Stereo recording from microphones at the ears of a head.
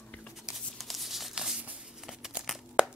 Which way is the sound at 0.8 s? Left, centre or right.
Centre.